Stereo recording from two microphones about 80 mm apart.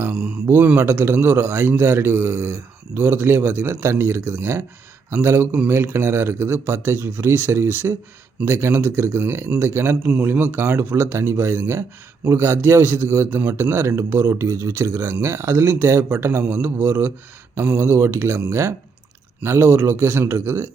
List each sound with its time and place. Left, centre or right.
0.1 s mantra: centre
0.4 s a man's voice: right
10.0 s speech: centre
10.2 s a man's voice: right